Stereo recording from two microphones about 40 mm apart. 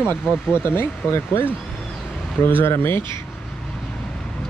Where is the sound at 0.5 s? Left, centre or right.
Left.